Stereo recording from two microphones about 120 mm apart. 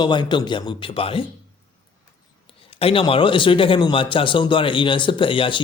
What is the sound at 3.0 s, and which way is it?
A man's voice, 45° left (ahead or behind).